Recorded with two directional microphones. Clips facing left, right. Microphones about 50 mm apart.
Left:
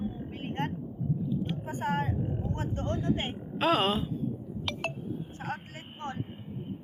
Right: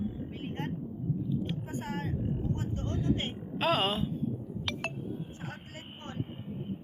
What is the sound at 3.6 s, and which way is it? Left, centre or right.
Speech, centre.